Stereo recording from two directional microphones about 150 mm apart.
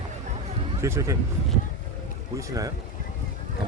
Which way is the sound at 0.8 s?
20° right (ahead or behind).